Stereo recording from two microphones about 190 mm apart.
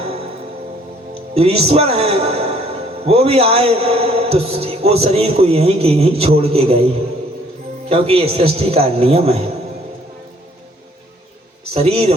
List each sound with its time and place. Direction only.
1.4 s a man's voice: 30° right (ahead or behind)
11.7 s a man's voice: 30° right (ahead or behind)